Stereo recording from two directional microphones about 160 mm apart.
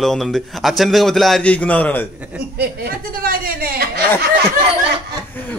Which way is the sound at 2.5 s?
70° right (ahead or behind).